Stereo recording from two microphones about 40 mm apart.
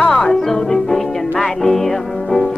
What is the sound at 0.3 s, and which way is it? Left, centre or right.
Music, centre.